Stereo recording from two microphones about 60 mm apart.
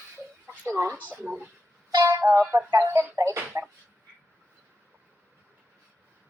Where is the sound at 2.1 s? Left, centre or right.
Right.